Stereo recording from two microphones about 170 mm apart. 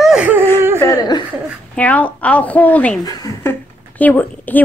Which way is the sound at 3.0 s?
20° left (ahead or behind).